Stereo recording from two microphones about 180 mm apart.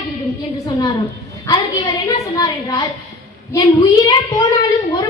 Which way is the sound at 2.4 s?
20° left (ahead or behind).